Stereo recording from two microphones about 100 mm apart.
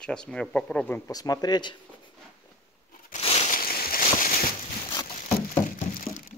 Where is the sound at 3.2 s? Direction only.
85° left.